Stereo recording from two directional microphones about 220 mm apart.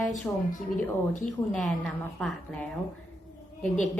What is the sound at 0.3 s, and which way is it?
A woman's voice, 10° left (ahead or behind).